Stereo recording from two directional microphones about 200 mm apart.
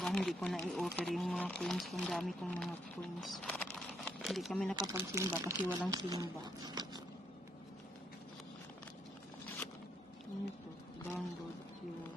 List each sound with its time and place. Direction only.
0.0 s speech: centre (ahead or behind)
3.7 s crumpling: centre (ahead or behind)
4.7 s speech: 15° right (ahead or behind)